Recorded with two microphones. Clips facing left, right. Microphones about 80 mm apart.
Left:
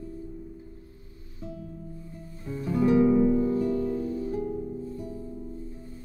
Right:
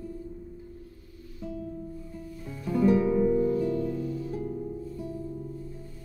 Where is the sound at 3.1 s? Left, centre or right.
Centre.